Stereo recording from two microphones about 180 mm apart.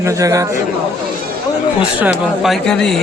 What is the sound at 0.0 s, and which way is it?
Speech, 20° right (ahead or behind).